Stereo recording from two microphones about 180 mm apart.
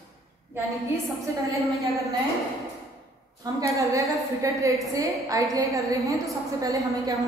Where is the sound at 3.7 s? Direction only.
15° right (ahead or behind).